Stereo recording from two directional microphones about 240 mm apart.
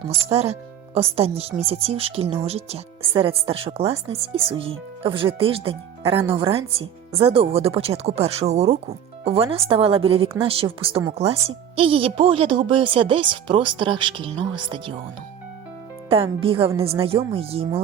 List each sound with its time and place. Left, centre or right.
0.1 s speech: right
16.0 s speech: right